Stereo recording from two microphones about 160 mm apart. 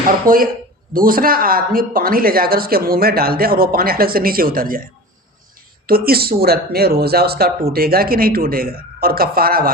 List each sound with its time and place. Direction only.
0.3 s speech: 60° right (ahead or behind)